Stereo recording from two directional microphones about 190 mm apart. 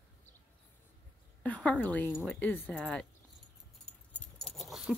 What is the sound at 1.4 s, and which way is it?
A woman's voice, 5° left (ahead or behind).